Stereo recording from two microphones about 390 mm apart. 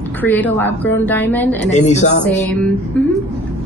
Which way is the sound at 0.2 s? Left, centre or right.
Centre.